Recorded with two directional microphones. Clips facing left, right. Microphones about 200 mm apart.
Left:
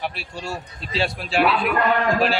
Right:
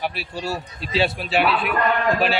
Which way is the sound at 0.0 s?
Centre (ahead or behind).